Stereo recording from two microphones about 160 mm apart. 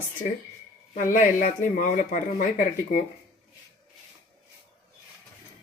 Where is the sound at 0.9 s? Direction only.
55° left (ahead or behind).